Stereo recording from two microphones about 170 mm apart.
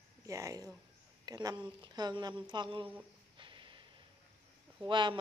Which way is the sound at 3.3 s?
30° right (ahead or behind).